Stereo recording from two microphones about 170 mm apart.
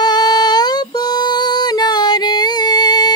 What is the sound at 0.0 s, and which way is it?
Female singing, 25° left (ahead or behind).